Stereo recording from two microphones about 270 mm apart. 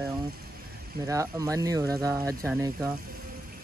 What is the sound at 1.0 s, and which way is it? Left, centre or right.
Speech, centre.